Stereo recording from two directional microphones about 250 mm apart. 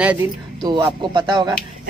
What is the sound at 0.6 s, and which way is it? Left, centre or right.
Speech, centre.